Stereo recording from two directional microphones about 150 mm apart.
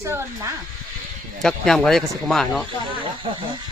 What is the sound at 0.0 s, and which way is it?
Speech, 20° right (ahead or behind).